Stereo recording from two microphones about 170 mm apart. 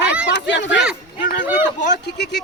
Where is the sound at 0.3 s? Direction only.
90° left.